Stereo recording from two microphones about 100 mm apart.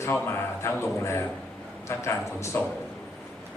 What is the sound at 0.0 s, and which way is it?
Speech, 25° left (ahead or behind).